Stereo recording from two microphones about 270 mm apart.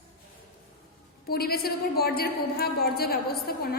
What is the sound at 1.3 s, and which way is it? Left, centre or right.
A woman's voice, left.